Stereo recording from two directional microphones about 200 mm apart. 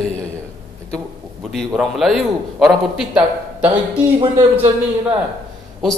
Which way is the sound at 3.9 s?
25° right (ahead or behind).